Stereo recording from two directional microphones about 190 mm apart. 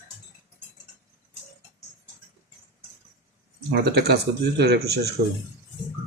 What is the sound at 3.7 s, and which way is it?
Speech, 60° right (ahead or behind).